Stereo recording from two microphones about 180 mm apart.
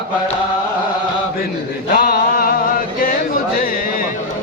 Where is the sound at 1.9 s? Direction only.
55° left (ahead or behind).